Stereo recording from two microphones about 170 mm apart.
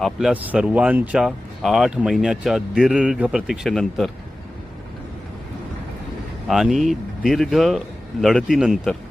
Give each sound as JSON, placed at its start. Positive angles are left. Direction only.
{"t": 0.0, "sound": "speech", "side_deg": -5}
{"t": 6.5, "sound": "speech", "side_deg": 0}